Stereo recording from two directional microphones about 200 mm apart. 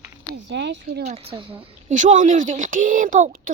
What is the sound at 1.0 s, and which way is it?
A woman's voice, 35° right (ahead or behind).